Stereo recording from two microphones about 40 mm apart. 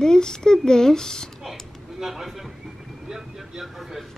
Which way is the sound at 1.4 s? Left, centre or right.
Centre.